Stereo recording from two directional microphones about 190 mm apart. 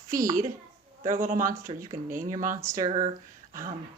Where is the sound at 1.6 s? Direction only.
15° right (ahead or behind).